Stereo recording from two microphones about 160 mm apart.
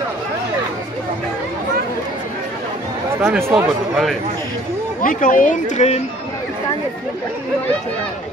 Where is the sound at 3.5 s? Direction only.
Centre (ahead or behind).